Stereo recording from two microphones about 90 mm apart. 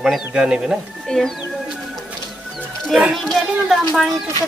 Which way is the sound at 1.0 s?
5° left (ahead or behind).